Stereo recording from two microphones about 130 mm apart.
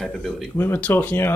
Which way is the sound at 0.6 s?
15° left (ahead or behind).